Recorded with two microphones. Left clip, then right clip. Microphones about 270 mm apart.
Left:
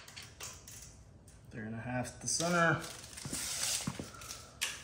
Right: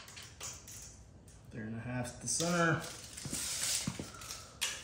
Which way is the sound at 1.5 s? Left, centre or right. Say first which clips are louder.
Left 3 dB; centre.